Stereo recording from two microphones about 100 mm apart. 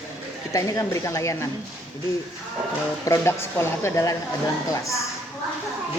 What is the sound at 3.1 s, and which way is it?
A woman's voice, 25° left (ahead or behind).